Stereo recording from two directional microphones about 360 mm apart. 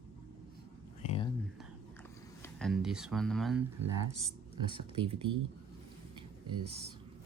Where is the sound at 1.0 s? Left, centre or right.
Centre.